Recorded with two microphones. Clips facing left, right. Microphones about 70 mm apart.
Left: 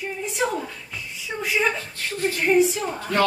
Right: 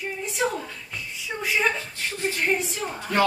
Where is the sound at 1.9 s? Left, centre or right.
Centre.